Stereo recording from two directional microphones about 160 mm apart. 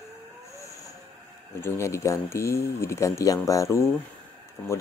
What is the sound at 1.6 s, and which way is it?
Speech, 15° left (ahead or behind).